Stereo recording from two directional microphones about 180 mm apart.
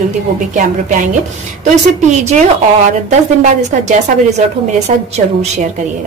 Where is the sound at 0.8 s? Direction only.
45° right (ahead or behind).